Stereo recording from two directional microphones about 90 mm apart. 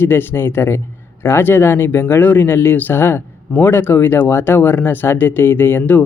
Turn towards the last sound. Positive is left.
turn(degrees=20)  # may be behind; listen again after turning